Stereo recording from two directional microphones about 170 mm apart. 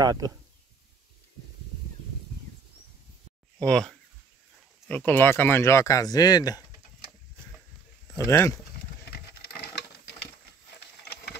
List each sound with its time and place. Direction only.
0.0 s speech: 20° right (ahead or behind)
3.6 s speech: 5° left (ahead or behind); by 6.6 s 20° left (ahead or behind)
8.2 s speech: 15° left (ahead or behind)